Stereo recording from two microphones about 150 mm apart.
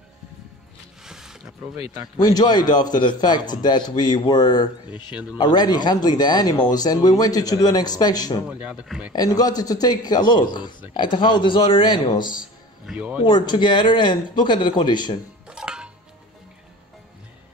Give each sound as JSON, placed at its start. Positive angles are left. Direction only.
{"t": 1.0, "sound": "music", "side_deg": -5}
{"t": 2.2, "sound": "a man's voice", "side_deg": 25}
{"t": 8.5, "sound": "a man's voice", "side_deg": -10}
{"t": 9.1, "sound": "a man's voice", "side_deg": 25}
{"t": 12.8, "sound": "a man's voice", "side_deg": -10}
{"t": 13.2, "sound": "a man's voice", "side_deg": 35}
{"t": 15.4, "sound": "music", "side_deg": -5}